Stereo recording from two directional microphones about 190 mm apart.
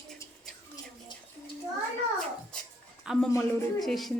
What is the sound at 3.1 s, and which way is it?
Speech, 5° right (ahead or behind).